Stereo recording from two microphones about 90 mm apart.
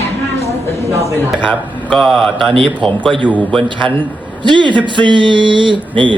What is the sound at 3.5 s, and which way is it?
Speech, 65° right (ahead or behind).